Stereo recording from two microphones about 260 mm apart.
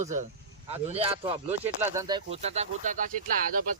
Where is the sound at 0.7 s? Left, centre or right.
Right.